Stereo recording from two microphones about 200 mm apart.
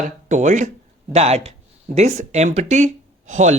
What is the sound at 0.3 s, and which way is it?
Speech, 40° right (ahead or behind).